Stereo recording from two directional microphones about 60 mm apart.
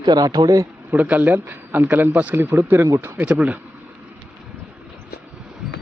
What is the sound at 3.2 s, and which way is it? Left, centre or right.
Speech, right.